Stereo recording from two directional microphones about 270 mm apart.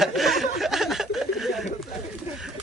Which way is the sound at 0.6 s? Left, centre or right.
Centre.